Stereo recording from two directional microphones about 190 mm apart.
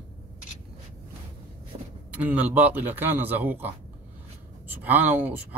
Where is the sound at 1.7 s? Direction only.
30° right (ahead or behind).